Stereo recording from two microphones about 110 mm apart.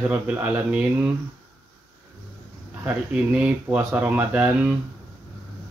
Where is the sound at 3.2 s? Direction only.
10° right (ahead or behind).